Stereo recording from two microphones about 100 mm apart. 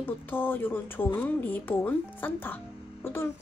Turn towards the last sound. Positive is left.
turn(degrees=25)  # may be behind; listen again after turning